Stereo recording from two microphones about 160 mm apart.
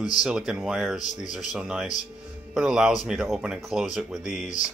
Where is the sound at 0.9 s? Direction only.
50° left (ahead or behind).